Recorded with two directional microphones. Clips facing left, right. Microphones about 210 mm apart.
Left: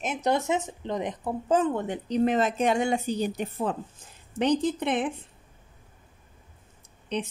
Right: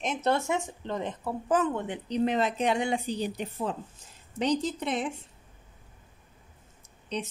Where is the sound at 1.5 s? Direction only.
35° left (ahead or behind); by 5.1 s 55° left (ahead or behind).